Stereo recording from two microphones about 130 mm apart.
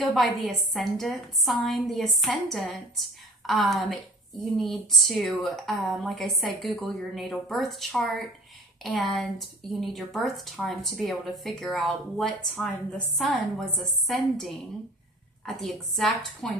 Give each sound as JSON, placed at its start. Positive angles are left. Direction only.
{"t": 0.0, "sound": "speech", "side_deg": 0}
{"t": 15.4, "sound": "speech", "side_deg": 0}